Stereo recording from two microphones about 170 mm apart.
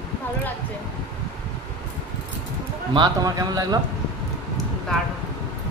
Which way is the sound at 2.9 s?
25° right (ahead or behind).